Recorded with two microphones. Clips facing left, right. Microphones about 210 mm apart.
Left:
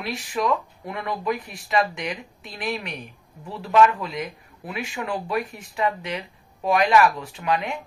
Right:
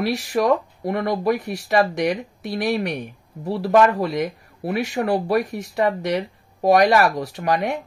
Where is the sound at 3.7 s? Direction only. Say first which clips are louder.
Right 2 dB; 45° right (ahead or behind).